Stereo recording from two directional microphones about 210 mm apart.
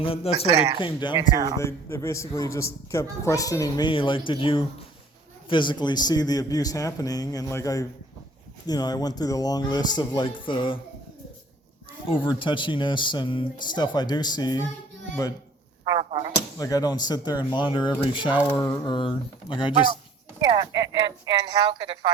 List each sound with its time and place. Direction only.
0.0 s a man's voice: 25° left (ahead or behind)
12.0 s a man's voice: 25° left (ahead or behind)
15.9 s a sound: 25° right (ahead or behind)
16.3 s speech: 15° left (ahead or behind)
20.5 s speech: 20° right (ahead or behind)